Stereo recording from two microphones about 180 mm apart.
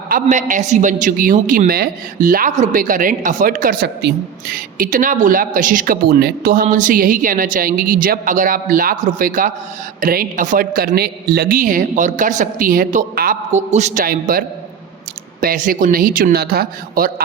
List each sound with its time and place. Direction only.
0.1 s a man's voice: 45° right (ahead or behind)